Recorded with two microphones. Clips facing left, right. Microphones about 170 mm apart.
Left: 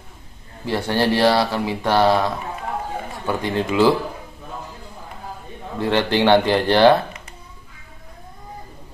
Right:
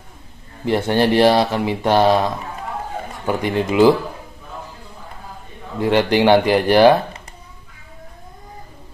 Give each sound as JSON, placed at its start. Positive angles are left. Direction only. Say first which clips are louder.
{"t": 0.7, "sound": "speech", "louder": "right 3 dB", "side_deg": -20}
{"t": 5.8, "sound": "speech", "louder": "right 3 dB", "side_deg": -15}